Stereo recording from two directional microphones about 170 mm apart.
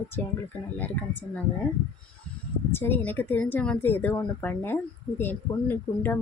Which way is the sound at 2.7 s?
10° left (ahead or behind).